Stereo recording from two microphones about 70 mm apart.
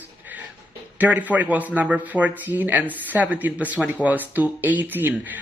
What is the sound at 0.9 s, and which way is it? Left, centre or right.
Speech, right.